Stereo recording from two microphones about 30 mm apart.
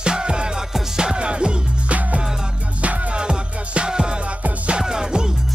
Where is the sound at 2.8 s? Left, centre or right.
Right.